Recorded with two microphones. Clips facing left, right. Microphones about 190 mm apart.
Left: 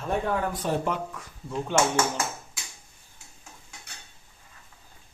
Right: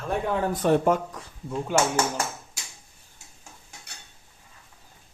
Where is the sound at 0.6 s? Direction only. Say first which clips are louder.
Right 9 dB; 50° right (ahead or behind).